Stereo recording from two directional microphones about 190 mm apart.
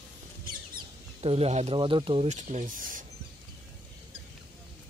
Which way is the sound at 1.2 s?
30° right (ahead or behind).